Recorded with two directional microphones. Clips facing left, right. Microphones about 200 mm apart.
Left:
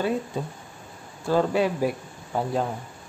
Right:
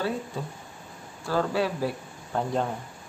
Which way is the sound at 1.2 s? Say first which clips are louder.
Left 4 dB; 20° left (ahead or behind).